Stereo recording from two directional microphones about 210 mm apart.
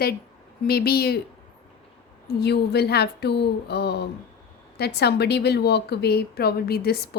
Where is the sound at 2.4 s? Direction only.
50° left (ahead or behind).